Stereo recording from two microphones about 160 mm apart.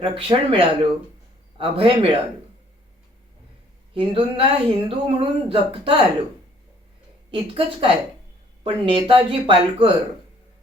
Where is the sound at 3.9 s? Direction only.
35° right (ahead or behind).